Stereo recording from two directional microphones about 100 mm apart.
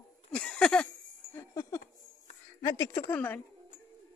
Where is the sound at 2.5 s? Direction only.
40° left (ahead or behind).